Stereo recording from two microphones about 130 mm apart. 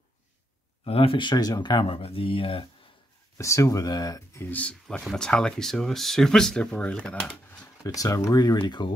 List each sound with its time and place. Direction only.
0.8 s speech: 45° left (ahead or behind)
3.3 s speech: 25° left (ahead or behind); by 7.3 s 5° left (ahead or behind)
7.8 s speech: 25° left (ahead or behind)